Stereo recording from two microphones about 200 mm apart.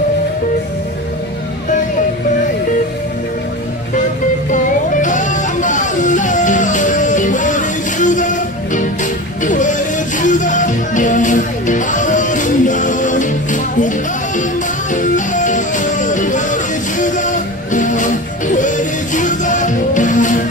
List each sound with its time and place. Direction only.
5.0 s music: 40° left (ahead or behind)